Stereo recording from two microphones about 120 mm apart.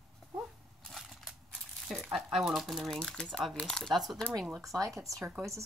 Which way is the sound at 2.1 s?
Centre (ahead or behind).